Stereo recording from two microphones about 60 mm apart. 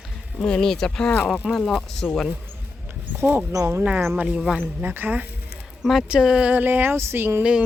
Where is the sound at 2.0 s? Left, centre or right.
Left.